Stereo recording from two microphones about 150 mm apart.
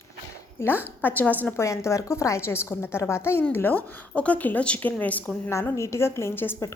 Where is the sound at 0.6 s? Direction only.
15° left (ahead or behind).